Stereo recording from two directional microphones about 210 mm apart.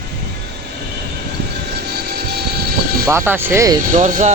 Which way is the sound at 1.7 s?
50° right (ahead or behind).